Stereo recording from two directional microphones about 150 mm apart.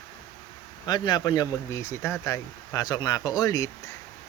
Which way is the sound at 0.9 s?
30° left (ahead or behind).